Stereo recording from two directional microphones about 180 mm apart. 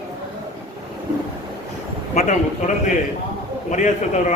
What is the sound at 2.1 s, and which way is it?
A man's voice, 40° left (ahead or behind).